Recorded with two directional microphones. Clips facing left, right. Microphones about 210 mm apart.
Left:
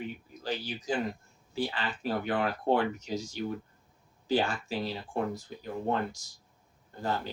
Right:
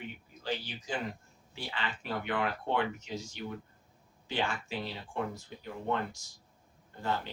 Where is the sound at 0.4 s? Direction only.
40° left (ahead or behind).